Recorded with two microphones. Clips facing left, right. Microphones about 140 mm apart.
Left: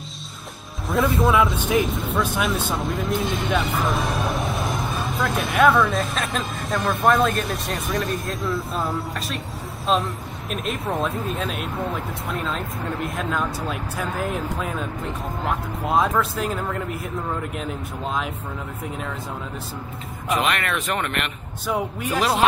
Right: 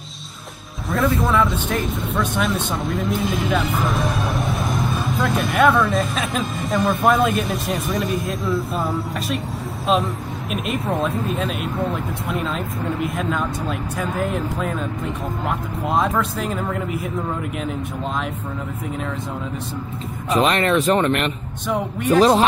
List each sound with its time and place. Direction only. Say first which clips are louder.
0.8 s speech: even; centre (ahead or behind)
10.5 s speech: right 3 dB; centre (ahead or behind)
20.2 s speech: right 5 dB; 30° right (ahead or behind)
21.6 s speech: right 4 dB; 5° left (ahead or behind)